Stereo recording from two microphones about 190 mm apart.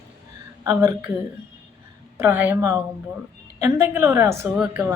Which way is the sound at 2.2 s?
10° right (ahead or behind).